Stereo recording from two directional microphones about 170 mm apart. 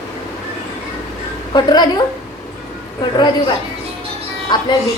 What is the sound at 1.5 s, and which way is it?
Speech, 25° left (ahead or behind).